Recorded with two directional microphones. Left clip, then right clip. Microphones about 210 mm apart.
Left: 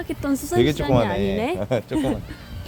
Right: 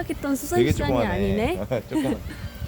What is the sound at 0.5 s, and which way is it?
Speech, 50° left (ahead or behind).